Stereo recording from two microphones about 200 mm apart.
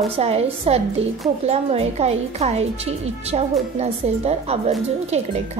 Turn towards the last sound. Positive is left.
turn(degrees=-35)  # may be behind; listen again after turning